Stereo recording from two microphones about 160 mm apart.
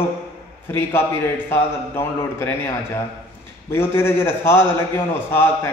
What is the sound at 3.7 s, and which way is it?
A man's voice, 15° left (ahead or behind).